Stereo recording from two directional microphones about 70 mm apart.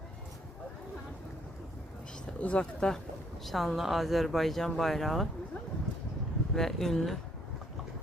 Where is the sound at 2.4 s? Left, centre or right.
Centre.